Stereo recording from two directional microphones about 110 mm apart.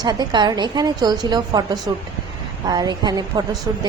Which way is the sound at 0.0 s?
40° right (ahead or behind).